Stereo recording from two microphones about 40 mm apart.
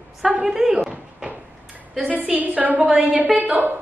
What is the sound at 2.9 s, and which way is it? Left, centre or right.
Speech, centre.